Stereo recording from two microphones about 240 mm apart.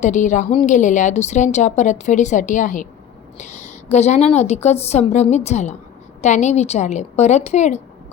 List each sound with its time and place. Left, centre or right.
0.0 s a woman's voice: left